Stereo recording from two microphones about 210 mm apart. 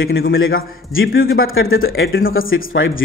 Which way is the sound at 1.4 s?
70° left (ahead or behind).